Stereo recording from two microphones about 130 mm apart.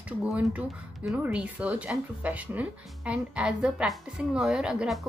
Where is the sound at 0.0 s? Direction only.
10° right (ahead or behind).